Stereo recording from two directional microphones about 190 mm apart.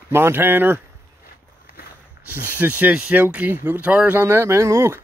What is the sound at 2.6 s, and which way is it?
Speech, 10° right (ahead or behind).